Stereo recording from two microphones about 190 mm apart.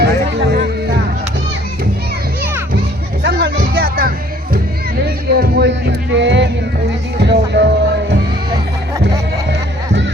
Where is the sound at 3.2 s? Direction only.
60° right (ahead or behind).